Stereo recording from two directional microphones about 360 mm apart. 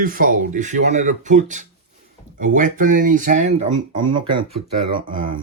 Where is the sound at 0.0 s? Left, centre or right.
Right.